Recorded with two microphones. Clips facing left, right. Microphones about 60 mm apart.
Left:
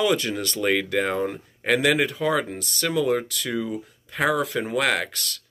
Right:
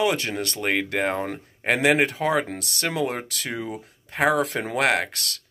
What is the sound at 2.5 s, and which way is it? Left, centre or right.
Speech, right.